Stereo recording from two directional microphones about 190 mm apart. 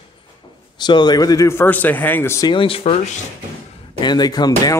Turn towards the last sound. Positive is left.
turn(degrees=20)  # may be behind; listen again after turning